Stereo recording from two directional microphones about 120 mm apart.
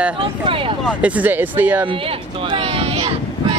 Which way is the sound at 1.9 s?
45° right (ahead or behind).